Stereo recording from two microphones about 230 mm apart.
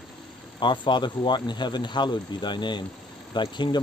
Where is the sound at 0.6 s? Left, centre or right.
Centre.